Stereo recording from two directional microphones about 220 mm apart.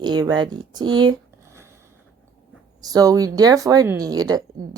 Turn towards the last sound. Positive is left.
turn(degrees=-15)  # may be behind; listen again after turning